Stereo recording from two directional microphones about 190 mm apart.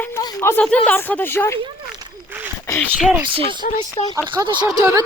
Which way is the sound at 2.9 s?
5° right (ahead or behind).